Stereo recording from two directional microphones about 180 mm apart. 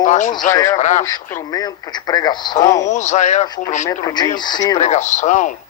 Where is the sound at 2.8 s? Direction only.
40° left (ahead or behind).